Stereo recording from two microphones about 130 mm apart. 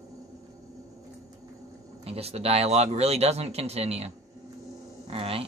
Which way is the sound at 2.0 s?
50° right (ahead or behind).